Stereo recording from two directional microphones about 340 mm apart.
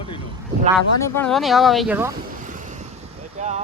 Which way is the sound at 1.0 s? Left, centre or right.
Centre.